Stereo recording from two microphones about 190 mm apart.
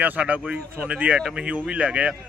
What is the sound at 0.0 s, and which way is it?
A man's voice, 10° right (ahead or behind).